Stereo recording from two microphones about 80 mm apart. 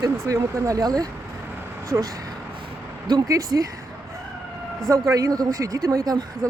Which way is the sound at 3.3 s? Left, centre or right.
Right.